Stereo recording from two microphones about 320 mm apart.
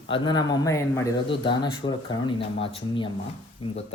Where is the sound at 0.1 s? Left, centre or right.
Centre.